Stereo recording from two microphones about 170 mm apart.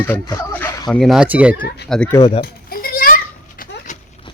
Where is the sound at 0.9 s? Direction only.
Centre (ahead or behind).